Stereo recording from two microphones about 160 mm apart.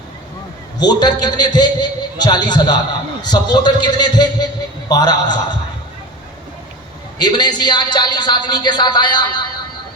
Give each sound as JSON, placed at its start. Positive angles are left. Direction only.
{"t": 0.8, "sound": "a man's voice", "side_deg": 25}
{"t": 7.2, "sound": "a man's voice", "side_deg": 25}